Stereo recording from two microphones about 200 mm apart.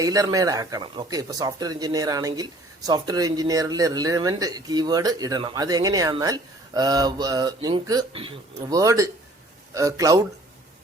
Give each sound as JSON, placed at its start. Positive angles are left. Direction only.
{"t": 0.0, "sound": "speech", "side_deg": -15}